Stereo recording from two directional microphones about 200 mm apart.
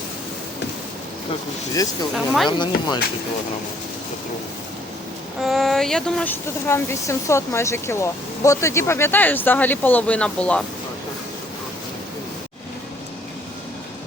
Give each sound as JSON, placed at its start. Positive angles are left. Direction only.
{"t": 1.7, "sound": "speech", "side_deg": 20}
{"t": 2.1, "sound": "speech", "side_deg": 0}
{"t": 2.5, "sound": "speech", "side_deg": 20}
{"t": 5.4, "sound": "speech", "side_deg": 0}